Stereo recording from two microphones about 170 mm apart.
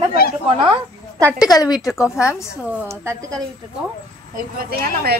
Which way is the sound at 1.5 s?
20° left (ahead or behind).